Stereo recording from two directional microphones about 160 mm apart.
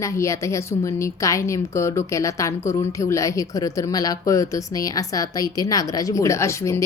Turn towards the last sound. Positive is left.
turn(degrees=20)  # may be behind; listen again after turning